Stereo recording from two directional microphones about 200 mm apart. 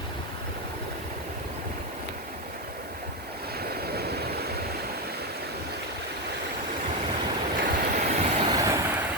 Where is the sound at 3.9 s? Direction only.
50° right (ahead or behind).